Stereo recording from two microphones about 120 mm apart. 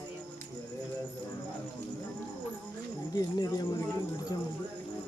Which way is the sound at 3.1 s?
30° left (ahead or behind).